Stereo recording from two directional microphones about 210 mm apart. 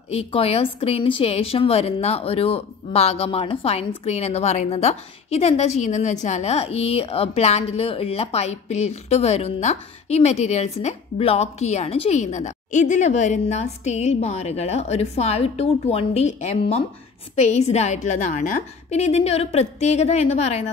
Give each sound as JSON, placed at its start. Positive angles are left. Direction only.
{"t": 0.1, "sound": "speech", "side_deg": 30}